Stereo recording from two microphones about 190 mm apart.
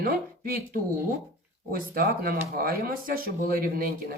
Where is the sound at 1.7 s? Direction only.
50° right (ahead or behind).